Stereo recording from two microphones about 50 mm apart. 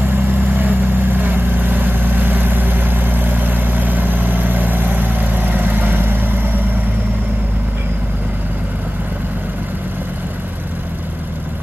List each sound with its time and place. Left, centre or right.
0.1 s vehicle: right